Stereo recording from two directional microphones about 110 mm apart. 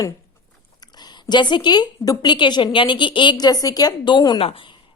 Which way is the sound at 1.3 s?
45° left (ahead or behind).